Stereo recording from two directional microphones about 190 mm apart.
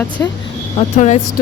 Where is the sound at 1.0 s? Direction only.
35° left (ahead or behind).